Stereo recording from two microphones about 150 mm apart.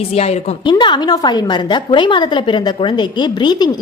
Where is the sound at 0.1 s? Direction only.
45° left (ahead or behind).